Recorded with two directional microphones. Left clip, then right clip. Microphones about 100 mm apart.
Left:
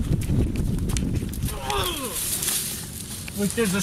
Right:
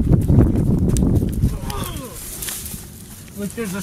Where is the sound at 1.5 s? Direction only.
Centre (ahead or behind).